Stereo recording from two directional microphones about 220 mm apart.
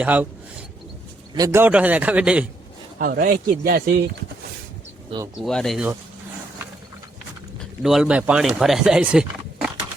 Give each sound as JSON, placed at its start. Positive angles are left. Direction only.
{"t": 0.0, "sound": "a man's voice", "side_deg": -5}
{"t": 1.4, "sound": "a man's voice", "side_deg": -10}
{"t": 3.0, "sound": "speech", "side_deg": -40}
{"t": 5.4, "sound": "speech", "side_deg": 0}
{"t": 7.6, "sound": "speech", "side_deg": 0}